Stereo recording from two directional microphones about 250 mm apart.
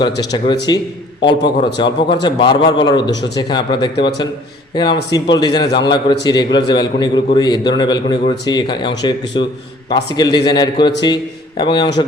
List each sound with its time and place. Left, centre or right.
0.0 s a man's voice: centre